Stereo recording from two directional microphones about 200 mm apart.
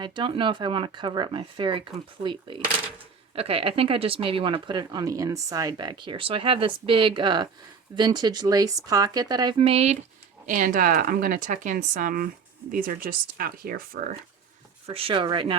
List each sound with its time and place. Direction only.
0.0 s speech: 25° right (ahead or behind); by 14.1 s 45° right (ahead or behind)
14.8 s speech: 30° right (ahead or behind)